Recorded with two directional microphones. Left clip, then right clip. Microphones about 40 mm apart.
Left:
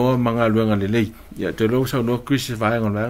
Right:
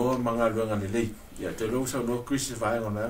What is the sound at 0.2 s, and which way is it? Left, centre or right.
A man's voice, right.